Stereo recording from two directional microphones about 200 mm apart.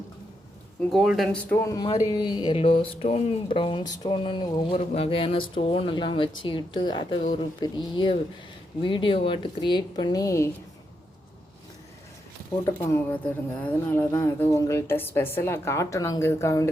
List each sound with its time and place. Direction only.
0.9 s speech: centre (ahead or behind); by 10.5 s 15° left (ahead or behind)
12.6 s speech: 15° left (ahead or behind)